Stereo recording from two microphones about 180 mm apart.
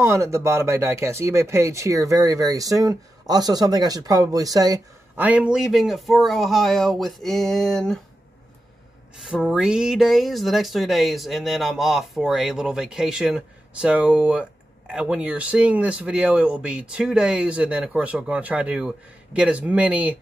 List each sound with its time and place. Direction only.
0.0 s speech: 15° right (ahead or behind)
5.1 s speech: 10° right (ahead or behind)
9.2 s speech: 5° right (ahead or behind)